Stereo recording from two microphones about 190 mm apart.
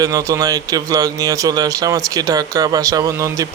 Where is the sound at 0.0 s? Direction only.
15° right (ahead or behind).